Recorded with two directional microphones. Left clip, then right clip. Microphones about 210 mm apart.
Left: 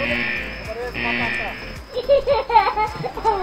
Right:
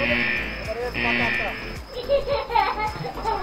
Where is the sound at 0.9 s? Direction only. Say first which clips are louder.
Even; centre (ahead or behind).